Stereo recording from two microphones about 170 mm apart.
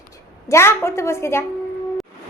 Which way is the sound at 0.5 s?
15° left (ahead or behind).